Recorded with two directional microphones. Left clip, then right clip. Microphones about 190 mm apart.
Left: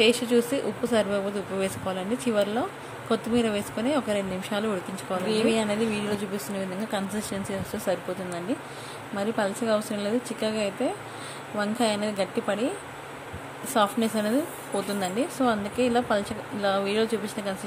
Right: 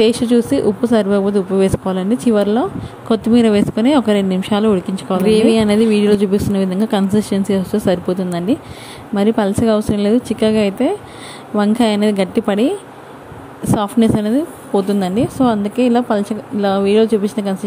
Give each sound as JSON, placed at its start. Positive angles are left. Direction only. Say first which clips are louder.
{"t": 0.0, "sound": "a woman's voice", "louder": "right 8 dB", "side_deg": -30}
{"t": 13.7, "sound": "a woman's voice", "louder": "right 7 dB", "side_deg": -35}